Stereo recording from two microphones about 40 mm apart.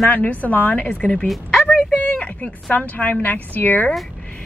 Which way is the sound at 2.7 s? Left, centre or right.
Left.